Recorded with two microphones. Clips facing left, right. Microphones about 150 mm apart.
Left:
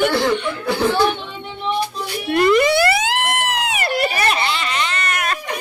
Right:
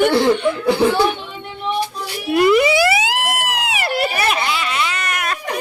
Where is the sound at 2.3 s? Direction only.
5° right (ahead or behind).